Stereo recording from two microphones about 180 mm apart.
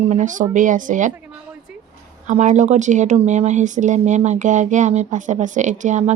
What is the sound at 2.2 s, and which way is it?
Speech, 40° right (ahead or behind).